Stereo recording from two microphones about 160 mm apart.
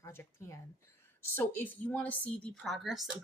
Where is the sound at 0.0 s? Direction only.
15° left (ahead or behind).